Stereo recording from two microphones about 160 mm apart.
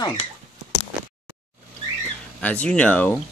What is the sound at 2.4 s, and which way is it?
Speech, 10° left (ahead or behind).